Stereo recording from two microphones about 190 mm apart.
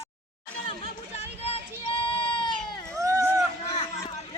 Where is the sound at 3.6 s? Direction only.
35° left (ahead or behind).